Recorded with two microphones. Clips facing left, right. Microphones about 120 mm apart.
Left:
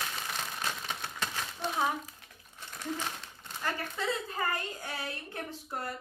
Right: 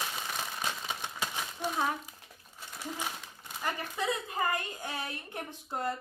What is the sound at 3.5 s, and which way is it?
A woman's voice, 15° right (ahead or behind).